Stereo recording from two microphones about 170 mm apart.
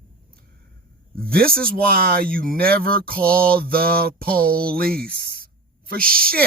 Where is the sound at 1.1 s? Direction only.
60° right (ahead or behind).